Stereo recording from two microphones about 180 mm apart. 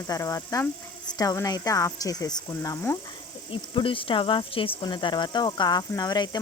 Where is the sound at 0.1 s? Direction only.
20° left (ahead or behind).